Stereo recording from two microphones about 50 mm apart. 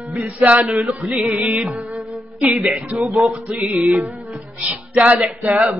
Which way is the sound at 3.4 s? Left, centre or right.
Right.